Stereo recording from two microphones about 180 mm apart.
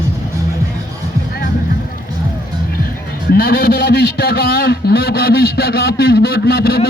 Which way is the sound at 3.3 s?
55° left (ahead or behind).